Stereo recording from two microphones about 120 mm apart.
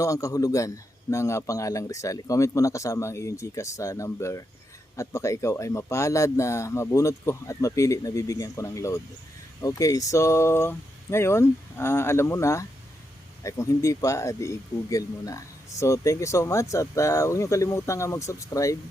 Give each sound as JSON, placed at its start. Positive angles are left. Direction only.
{"t": 0.0, "sound": "speech", "side_deg": 25}